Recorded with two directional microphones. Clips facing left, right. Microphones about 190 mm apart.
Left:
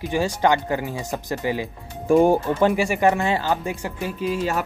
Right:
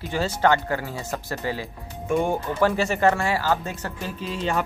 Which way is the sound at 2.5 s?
15° left (ahead or behind).